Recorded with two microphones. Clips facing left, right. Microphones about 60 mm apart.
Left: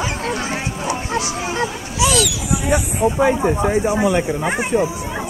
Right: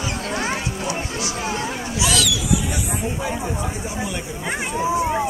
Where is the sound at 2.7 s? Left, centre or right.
Left.